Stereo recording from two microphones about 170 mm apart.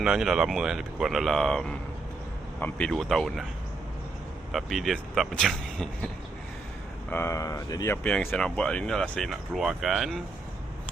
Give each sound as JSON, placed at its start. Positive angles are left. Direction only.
{"t": 0.0, "sound": "speech", "side_deg": -5}
{"t": 4.5, "sound": "speech", "side_deg": 0}
{"t": 7.1, "sound": "speech", "side_deg": 15}
{"t": 8.0, "sound": "speech", "side_deg": 5}